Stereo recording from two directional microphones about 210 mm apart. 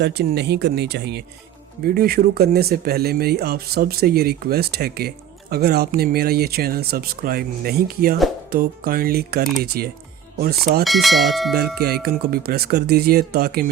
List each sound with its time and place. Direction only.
0.0 s speech: 50° right (ahead or behind)
10.8 s speech: centre (ahead or behind)
11.8 s speech: 50° right (ahead or behind)